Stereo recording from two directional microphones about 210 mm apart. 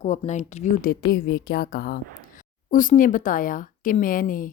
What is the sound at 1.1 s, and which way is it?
A woman's voice, 50° left (ahead or behind).